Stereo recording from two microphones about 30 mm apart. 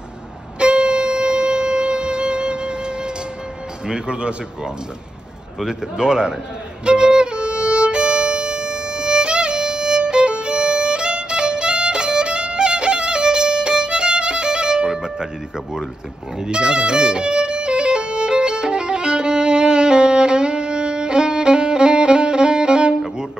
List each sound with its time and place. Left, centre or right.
0.6 s music: right
3.8 s speech: right
5.7 s speech: right
6.8 s violin: right
12.2 s music: right
16.3 s violin: right